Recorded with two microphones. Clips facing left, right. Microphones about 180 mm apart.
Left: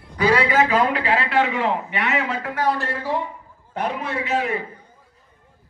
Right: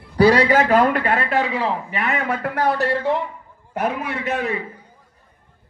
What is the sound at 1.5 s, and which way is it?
Speech, 35° right (ahead or behind).